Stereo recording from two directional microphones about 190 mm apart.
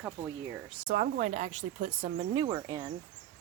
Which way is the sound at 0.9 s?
40° right (ahead or behind).